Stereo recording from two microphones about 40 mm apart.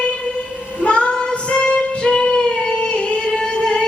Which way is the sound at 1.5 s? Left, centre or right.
Left.